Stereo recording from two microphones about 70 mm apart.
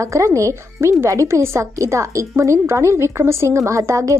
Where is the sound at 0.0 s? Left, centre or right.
Right.